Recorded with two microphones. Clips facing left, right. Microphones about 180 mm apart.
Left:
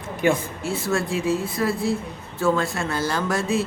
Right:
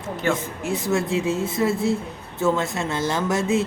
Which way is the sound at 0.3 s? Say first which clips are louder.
Right 1 dB; 20° right (ahead or behind).